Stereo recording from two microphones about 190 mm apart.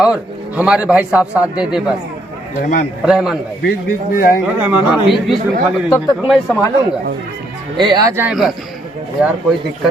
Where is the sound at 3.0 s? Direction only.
5° right (ahead or behind).